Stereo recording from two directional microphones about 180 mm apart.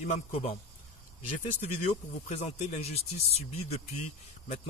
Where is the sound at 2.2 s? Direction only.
35° left (ahead or behind).